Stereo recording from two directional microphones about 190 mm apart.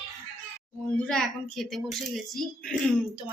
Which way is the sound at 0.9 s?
5° left (ahead or behind).